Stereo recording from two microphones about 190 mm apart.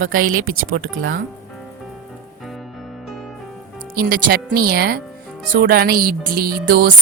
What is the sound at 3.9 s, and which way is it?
Speech, 50° right (ahead or behind).